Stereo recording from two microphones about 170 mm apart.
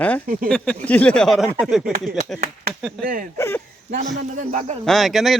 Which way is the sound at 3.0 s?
55° right (ahead or behind).